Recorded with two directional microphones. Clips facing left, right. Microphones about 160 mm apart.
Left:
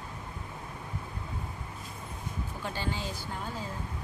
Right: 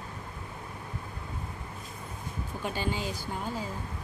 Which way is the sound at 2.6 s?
15° right (ahead or behind).